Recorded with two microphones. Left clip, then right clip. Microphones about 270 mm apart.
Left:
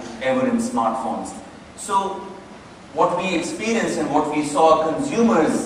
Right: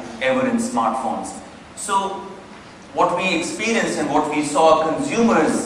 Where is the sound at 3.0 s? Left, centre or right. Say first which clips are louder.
Right 1 dB; centre.